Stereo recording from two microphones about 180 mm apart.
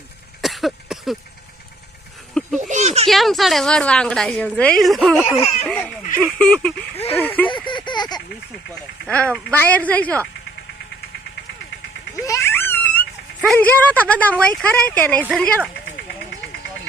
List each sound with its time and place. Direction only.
0.4 s a sound: centre (ahead or behind)
2.6 s a child's voice: 40° right (ahead or behind)
3.1 s a woman's voice: centre (ahead or behind)
5.4 s speech: 35° left (ahead or behind)
5.6 s a woman's voice: 5° left (ahead or behind)
7.4 s a sound: 25° left (ahead or behind)
9.0 s speech: 5° left (ahead or behind)
12.2 s a sound: 15° left (ahead or behind)
13.4 s speech: 5° left (ahead or behind)
15.7 s vehicle: 65° left (ahead or behind)